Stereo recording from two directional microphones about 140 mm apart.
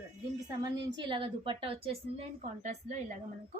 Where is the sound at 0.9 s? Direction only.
35° right (ahead or behind).